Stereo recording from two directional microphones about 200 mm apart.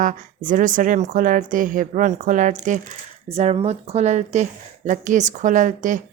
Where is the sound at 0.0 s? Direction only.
40° right (ahead or behind).